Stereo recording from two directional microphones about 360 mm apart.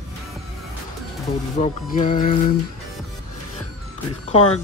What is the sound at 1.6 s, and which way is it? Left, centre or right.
Music, left.